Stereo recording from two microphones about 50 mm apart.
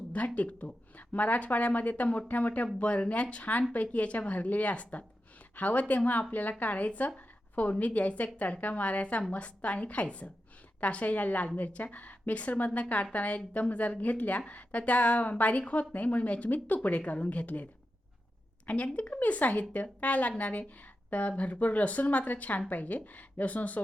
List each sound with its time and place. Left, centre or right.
0.3 s a woman's voice: left
18.9 s a woman's voice: left